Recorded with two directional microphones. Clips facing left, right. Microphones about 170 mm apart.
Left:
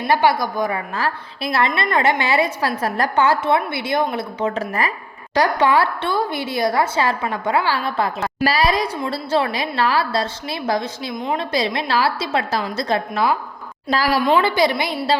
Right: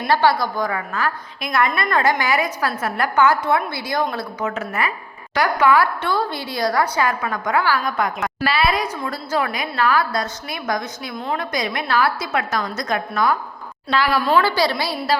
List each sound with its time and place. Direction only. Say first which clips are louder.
0.1 s a woman's voice: even; 20° left (ahead or behind); by 14.2 s 35° left (ahead or behind)
14.3 s a woman's voice: left 1 dB; 20° left (ahead or behind)